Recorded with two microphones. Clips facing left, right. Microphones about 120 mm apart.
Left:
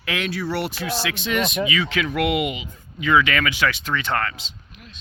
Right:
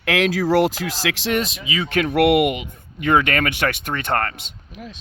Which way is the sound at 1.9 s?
55° right (ahead or behind).